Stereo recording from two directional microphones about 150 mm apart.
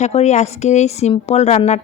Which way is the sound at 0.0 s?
45° left (ahead or behind).